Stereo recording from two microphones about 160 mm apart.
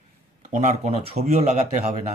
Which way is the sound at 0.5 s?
50° right (ahead or behind).